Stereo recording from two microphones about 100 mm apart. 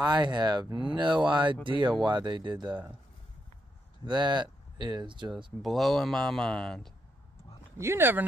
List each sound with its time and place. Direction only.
0.0 s speech: 45° right (ahead or behind)
4.0 s speech: 50° right (ahead or behind)
5.6 s speech: centre (ahead or behind)
7.7 s speech: 25° right (ahead or behind)